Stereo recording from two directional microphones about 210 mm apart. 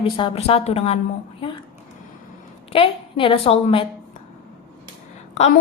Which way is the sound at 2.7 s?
25° left (ahead or behind).